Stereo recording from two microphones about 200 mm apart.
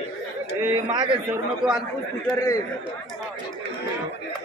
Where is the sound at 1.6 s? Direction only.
Centre (ahead or behind).